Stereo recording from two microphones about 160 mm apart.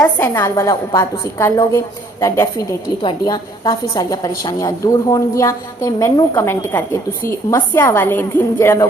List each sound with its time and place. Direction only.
0.0 s a woman's voice: 15° left (ahead or behind)
3.0 s a woman's voice: 25° left (ahead or behind)